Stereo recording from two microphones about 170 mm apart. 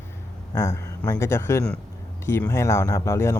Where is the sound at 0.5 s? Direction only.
20° left (ahead or behind).